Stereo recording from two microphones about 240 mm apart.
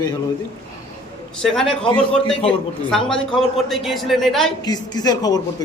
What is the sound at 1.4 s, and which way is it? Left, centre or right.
Speech, centre.